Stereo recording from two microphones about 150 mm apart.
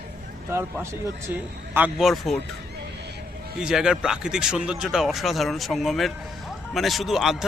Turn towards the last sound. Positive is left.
turn(degrees=0)  # may be behind; listen again after turning